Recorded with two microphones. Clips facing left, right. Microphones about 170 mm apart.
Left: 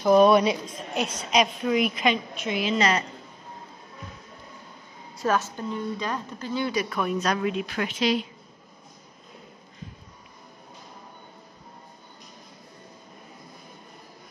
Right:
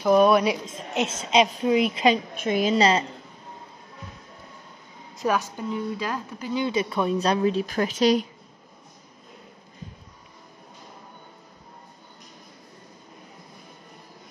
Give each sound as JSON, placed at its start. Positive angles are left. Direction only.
{"t": 0.0, "sound": "speech", "side_deg": 0}
{"t": 0.7, "sound": "a woman's voice", "side_deg": -25}
{"t": 2.3, "sound": "a woman's voice", "side_deg": -50}
{"t": 5.1, "sound": "a woman's voice", "side_deg": -15}
{"t": 6.5, "sound": "a woman's voice", "side_deg": -20}